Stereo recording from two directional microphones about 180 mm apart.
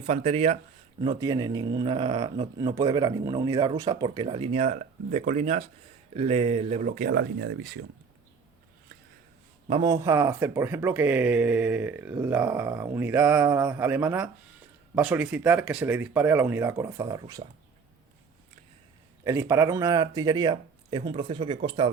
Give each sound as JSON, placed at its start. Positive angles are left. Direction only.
{"t": 0.1, "sound": "speech", "side_deg": -35}
{"t": 1.1, "sound": "speech", "side_deg": -20}
{"t": 6.8, "sound": "speech", "side_deg": -50}
{"t": 9.6, "sound": "a man's voice", "side_deg": -30}
{"t": 9.9, "sound": "speech", "side_deg": -15}
{"t": 19.2, "sound": "speech", "side_deg": -15}